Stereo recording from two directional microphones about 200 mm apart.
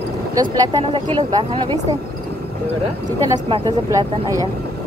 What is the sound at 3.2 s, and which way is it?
Speech, 15° right (ahead or behind).